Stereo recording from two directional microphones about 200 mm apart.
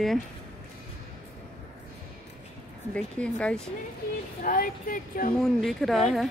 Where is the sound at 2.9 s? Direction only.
5° left (ahead or behind).